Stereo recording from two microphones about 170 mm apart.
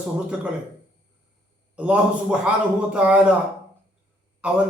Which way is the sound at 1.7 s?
5° right (ahead or behind).